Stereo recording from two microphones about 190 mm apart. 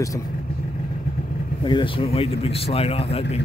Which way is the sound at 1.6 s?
25° left (ahead or behind).